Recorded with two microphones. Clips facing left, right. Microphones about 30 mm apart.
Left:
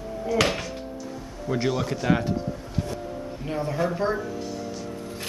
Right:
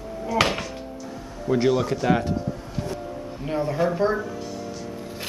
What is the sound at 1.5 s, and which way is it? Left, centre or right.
Speech, centre.